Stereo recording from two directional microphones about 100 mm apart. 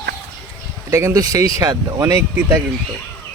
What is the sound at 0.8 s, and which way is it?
Speech, 30° right (ahead or behind).